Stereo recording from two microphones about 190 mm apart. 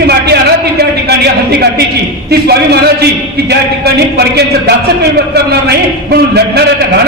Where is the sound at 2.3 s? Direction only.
55° right (ahead or behind).